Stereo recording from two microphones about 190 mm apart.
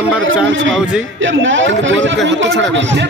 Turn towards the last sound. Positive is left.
turn(degrees=-70)  # may be behind; listen again after turning